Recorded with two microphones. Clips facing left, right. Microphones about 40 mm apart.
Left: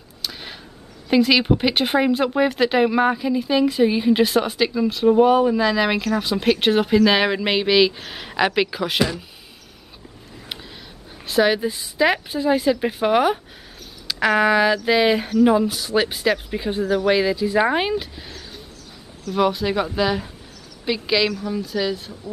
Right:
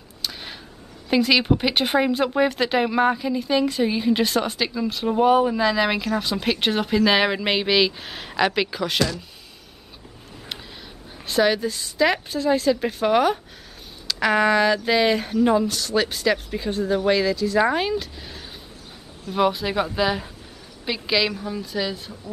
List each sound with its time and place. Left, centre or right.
0.2 s a sound: centre
1.0 s speech: centre
11.2 s a woman's voice: centre
19.3 s speech: centre